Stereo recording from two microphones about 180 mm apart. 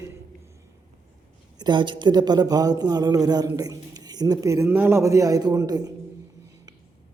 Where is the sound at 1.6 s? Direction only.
25° right (ahead or behind).